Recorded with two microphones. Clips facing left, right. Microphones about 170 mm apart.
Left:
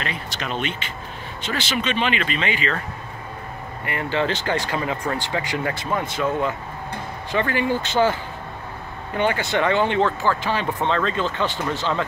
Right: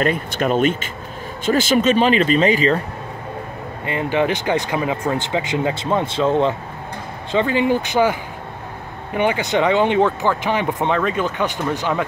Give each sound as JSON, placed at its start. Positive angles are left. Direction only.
{"t": 0.0, "sound": "speech", "side_deg": -50}
{"t": 3.8, "sound": "speech", "side_deg": -20}